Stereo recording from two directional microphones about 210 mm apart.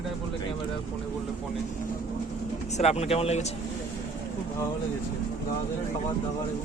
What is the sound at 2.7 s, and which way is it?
Speech, 30° left (ahead or behind).